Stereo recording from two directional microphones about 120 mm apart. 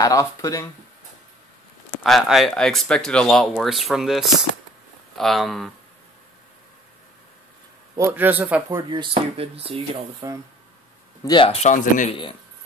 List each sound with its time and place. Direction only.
0.0 s speech: 25° left (ahead or behind)
2.0 s speech: centre (ahead or behind)
8.0 s a man's voice: 20° right (ahead or behind)
8.9 s speech: 55° right (ahead or behind)
10.2 s speech: 25° right (ahead or behind)
11.2 s speech: 40° left (ahead or behind)
11.5 s speech: 80° left